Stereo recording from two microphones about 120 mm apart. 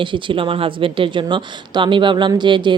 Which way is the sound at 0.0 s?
45° right (ahead or behind).